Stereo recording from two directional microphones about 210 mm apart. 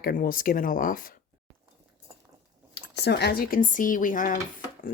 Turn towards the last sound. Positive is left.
turn(degrees=40)  # may be behind; listen again after turning